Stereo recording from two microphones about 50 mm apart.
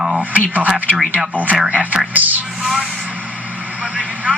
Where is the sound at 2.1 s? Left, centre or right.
Right.